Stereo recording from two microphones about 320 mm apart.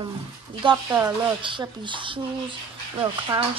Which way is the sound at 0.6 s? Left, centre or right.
Centre.